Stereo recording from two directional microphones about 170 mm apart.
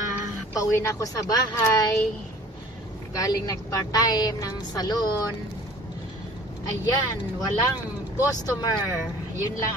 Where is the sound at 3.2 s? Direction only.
20° left (ahead or behind).